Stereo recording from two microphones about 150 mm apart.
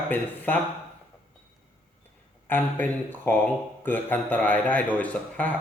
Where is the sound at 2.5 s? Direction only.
10° left (ahead or behind).